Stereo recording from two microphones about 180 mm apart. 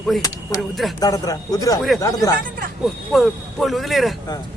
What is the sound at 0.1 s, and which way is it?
Speech, centre (ahead or behind).